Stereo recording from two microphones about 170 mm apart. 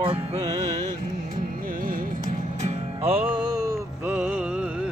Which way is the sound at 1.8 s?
55° right (ahead or behind).